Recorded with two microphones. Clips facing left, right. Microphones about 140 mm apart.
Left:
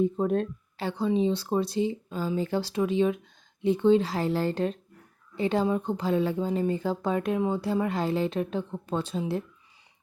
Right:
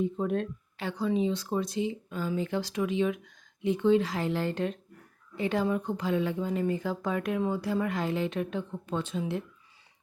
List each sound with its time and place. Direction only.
0.0 s speech: 35° left (ahead or behind)